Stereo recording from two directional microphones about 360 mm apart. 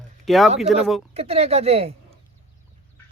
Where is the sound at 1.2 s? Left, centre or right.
Centre.